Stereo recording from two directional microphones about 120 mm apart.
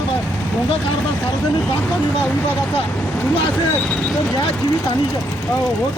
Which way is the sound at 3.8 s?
10° left (ahead or behind).